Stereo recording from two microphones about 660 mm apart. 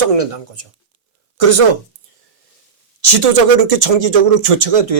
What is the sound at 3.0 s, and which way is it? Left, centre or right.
Speech, right.